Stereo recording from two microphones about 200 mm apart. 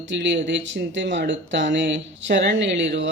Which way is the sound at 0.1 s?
65° right (ahead or behind).